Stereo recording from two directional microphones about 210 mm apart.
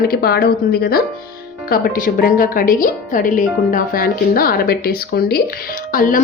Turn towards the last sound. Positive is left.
turn(degrees=40)  # may be behind; listen again after turning